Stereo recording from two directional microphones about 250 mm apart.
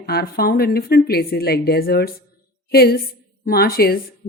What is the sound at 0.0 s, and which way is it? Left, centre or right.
A woman's voice, left.